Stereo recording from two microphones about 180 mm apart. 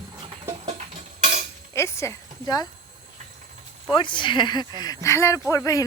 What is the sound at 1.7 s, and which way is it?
Speech, 15° left (ahead or behind).